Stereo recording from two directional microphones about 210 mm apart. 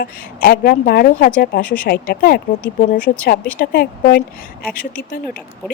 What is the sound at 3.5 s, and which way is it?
Speech, 45° left (ahead or behind).